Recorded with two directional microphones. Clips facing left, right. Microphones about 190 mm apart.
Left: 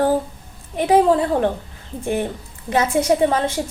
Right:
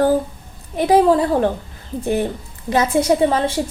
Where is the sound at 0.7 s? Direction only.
40° right (ahead or behind).